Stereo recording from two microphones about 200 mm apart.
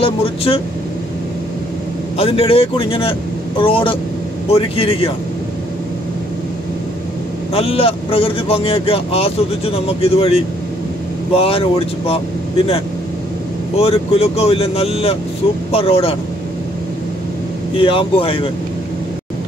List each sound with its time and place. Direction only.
0.0 s speech: 30° left (ahead or behind)
2.1 s speech: 30° left (ahead or behind)
7.5 s speech: 30° left (ahead or behind)
13.7 s speech: 30° left (ahead or behind)
17.7 s speech: 25° left (ahead or behind)